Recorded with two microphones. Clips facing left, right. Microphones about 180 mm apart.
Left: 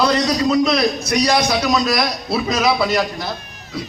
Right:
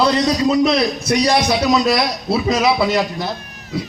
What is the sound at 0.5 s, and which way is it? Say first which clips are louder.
A man's voice: right 1 dB; 25° right (ahead or behind).